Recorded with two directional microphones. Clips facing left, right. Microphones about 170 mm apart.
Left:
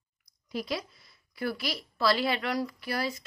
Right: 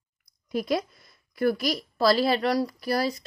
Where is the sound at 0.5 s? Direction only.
50° right (ahead or behind).